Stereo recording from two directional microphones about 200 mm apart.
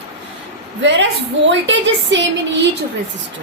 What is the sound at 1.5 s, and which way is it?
A woman's voice, 65° right (ahead or behind).